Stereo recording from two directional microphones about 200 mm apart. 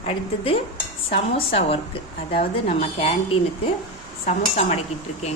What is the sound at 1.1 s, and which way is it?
Speech, 30° left (ahead or behind).